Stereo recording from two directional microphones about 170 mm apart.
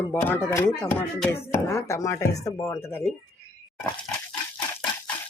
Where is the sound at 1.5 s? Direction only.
15° left (ahead or behind).